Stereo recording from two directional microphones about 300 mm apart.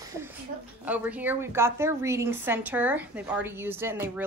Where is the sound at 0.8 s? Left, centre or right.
Centre.